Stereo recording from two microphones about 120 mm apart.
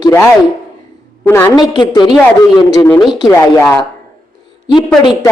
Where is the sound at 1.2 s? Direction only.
15° left (ahead or behind).